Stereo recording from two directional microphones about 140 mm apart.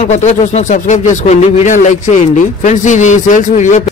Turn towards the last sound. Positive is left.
turn(degrees=60)  # may be behind; listen again after turning